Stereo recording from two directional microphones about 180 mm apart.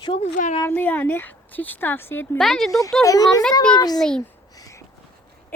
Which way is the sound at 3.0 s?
20° left (ahead or behind).